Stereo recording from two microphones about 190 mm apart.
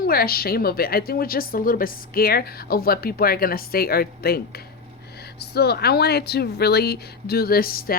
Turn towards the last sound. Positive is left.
turn(degrees=50)  # may be behind; listen again after turning